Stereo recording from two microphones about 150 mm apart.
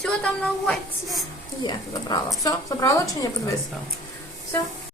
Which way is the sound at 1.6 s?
30° left (ahead or behind).